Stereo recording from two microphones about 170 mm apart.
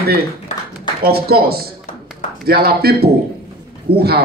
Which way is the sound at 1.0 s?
65° right (ahead or behind).